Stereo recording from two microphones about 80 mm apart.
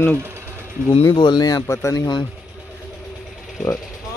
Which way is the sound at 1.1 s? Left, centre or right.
Left.